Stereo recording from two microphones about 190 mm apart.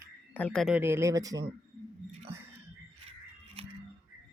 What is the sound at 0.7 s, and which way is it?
Speech, 10° right (ahead or behind).